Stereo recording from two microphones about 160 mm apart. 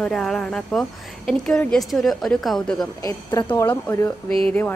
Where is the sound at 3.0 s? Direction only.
25° left (ahead or behind).